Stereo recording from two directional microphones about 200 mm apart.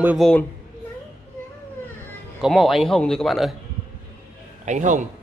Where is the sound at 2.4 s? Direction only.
Centre (ahead or behind).